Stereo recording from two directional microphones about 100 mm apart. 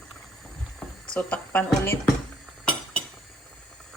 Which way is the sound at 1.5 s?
20° left (ahead or behind).